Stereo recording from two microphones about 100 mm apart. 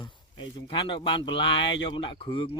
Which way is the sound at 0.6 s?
60° left (ahead or behind).